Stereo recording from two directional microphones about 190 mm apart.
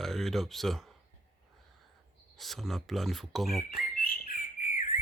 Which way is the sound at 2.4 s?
Centre (ahead or behind).